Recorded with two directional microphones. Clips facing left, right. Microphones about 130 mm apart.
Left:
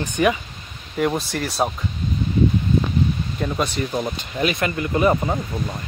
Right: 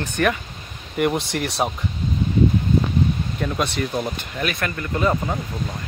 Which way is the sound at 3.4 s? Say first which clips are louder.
Left 1 dB; 10° left (ahead or behind).